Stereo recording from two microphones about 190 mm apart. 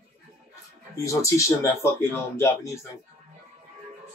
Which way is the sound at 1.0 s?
15° left (ahead or behind).